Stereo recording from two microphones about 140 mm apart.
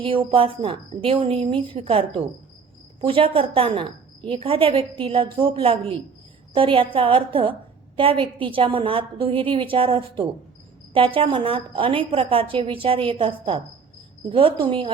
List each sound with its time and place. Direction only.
0.0 s a woman's voice: 40° right (ahead or behind)